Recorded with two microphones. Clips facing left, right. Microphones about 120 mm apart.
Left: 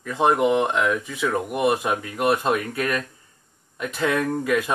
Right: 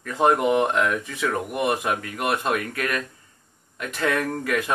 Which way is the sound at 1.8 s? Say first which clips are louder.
Left 3 dB; 25° left (ahead or behind).